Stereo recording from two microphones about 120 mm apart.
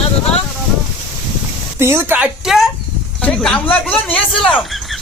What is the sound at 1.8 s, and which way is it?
Speech, 20° right (ahead or behind).